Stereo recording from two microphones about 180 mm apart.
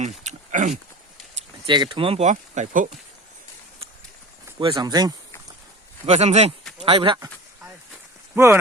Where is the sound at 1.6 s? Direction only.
25° right (ahead or behind); by 2.9 s 45° right (ahead or behind).